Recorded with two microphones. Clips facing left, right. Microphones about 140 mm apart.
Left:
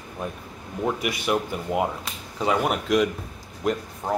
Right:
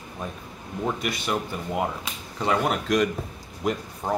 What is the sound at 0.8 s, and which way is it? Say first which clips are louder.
Speech: left 2 dB; 10° left (ahead or behind).